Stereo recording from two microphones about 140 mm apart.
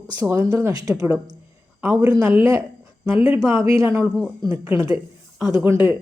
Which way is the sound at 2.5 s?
25° right (ahead or behind).